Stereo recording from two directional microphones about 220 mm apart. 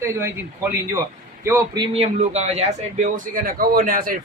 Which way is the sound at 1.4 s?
15° right (ahead or behind).